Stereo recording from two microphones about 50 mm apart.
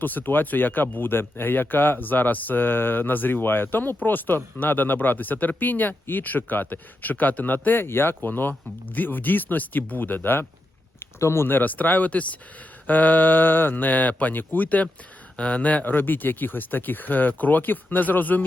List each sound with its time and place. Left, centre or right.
0.0 s speech: left
11.0 s a sound: left
11.4 s speech: left